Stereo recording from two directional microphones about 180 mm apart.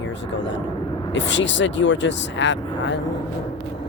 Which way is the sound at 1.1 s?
90° left.